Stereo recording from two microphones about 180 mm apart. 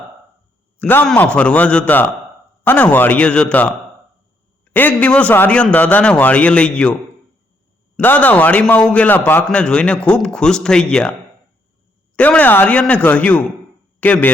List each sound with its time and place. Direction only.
0.8 s a man's voice: 10° left (ahead or behind)
4.7 s a man's voice: 10° left (ahead or behind)
7.9 s a man's voice: 10° left (ahead or behind)
12.1 s a man's voice: 10° left (ahead or behind)